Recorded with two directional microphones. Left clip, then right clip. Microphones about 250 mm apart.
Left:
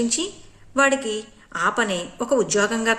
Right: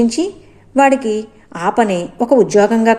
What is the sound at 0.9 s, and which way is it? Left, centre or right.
Speech, left.